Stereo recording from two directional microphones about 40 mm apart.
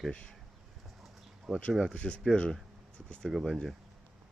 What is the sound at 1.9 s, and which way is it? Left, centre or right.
Speech, left.